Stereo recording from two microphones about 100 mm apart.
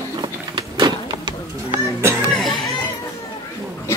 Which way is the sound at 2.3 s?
Centre (ahead or behind).